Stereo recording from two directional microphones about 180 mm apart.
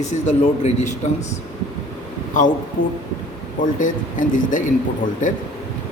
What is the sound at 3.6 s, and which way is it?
Speech, 45° left (ahead or behind).